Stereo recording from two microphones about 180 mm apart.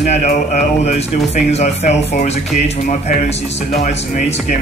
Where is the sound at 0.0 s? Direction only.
45° left (ahead or behind).